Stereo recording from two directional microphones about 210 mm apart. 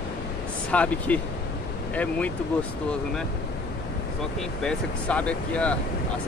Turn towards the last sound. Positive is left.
turn(degrees=5)  # may be behind; listen again after turning